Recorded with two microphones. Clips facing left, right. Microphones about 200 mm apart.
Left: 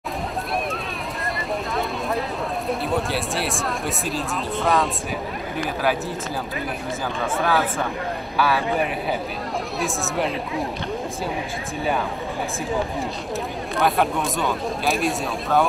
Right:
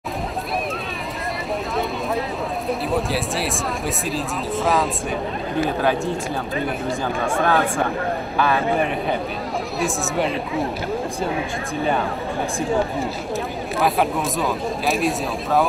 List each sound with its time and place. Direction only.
2.9 s speech: centre (ahead or behind)
7.3 s speech: 50° right (ahead or behind)
9.8 s speech: centre (ahead or behind)
13.7 s speech: centre (ahead or behind)